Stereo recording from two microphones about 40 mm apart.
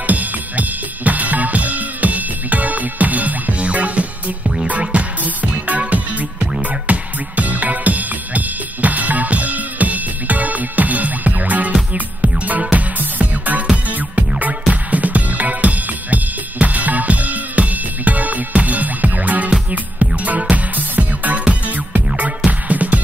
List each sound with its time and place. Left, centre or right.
0.0 s drum kit: right
4.6 s music: right